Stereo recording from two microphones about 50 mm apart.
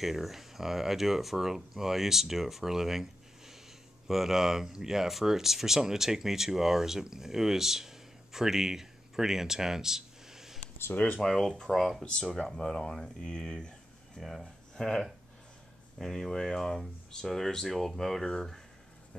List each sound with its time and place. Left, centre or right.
0.0 s speech: centre
11.1 s speech: centre
14.1 s a sound: centre
16.0 s speech: centre